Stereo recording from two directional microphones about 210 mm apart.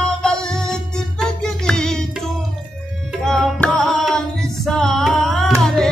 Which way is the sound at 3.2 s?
5° left (ahead or behind).